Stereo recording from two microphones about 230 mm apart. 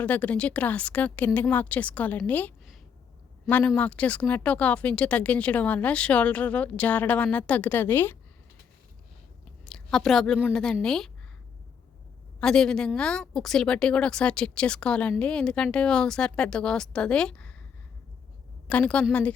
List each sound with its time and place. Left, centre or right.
0.0 s speech: centre
9.6 s a woman's voice: centre
12.4 s a woman's voice: centre
18.7 s a woman's voice: centre